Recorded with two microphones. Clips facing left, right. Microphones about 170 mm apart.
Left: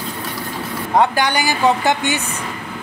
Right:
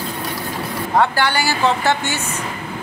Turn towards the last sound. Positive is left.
turn(degrees=15)  # may be behind; listen again after turning